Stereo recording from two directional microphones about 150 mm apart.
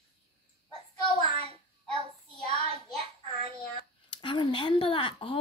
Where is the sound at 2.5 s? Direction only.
40° right (ahead or behind).